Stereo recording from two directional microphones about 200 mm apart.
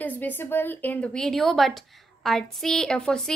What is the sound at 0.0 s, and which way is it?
A woman's voice, 10° left (ahead or behind).